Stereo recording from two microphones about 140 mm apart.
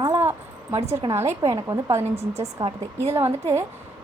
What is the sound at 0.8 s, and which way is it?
Speech, 50° right (ahead or behind).